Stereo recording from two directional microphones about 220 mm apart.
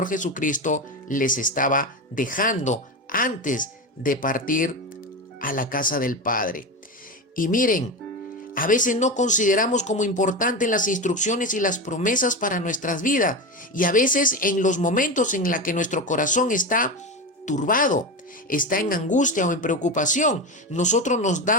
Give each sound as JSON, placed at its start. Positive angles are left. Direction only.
{"t": 0.0, "sound": "speech", "side_deg": 35}